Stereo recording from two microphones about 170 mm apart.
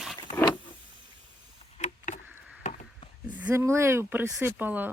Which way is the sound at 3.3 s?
10° right (ahead or behind).